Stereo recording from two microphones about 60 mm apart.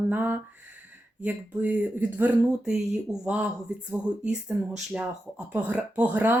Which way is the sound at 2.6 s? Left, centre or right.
Centre.